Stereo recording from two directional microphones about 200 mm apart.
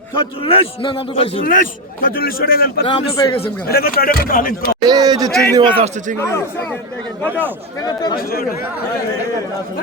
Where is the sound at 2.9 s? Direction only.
20° left (ahead or behind).